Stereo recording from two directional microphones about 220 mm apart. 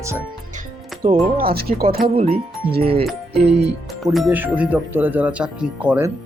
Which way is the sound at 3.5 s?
50° right (ahead or behind).